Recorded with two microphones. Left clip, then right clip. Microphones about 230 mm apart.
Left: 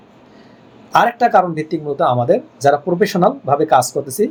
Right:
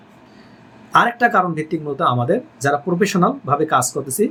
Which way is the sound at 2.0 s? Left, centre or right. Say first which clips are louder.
Left 3 dB; right.